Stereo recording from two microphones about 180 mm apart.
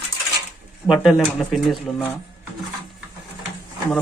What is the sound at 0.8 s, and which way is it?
Speech, 5° right (ahead or behind).